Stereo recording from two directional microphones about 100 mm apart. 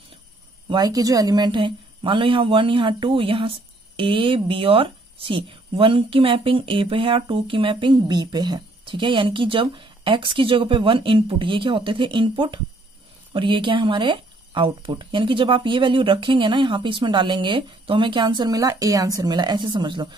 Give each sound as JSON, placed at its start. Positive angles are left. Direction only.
{"t": 0.7, "sound": "speech", "side_deg": -40}
{"t": 18.5, "sound": "a woman's voice", "side_deg": -35}